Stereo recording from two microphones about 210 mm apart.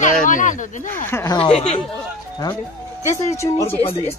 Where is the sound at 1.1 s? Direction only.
15° left (ahead or behind).